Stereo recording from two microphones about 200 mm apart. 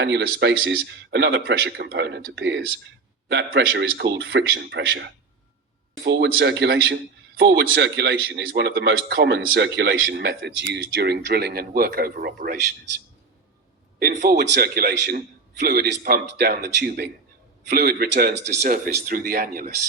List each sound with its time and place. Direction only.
0.0 s a man's voice: 60° right (ahead or behind)
14.1 s speech: 35° right (ahead or behind)
14.3 s a man's voice: 60° right (ahead or behind)